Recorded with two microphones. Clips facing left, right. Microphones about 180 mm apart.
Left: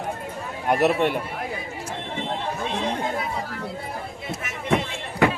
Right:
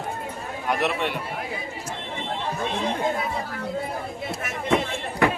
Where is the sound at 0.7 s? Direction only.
45° left (ahead or behind).